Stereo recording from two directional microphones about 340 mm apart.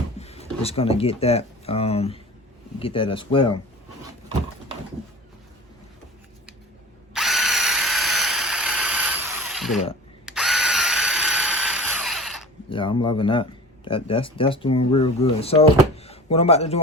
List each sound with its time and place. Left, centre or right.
0.2 s speech: centre
7.1 s drill: centre
10.2 s tools: centre
12.7 s speech: centre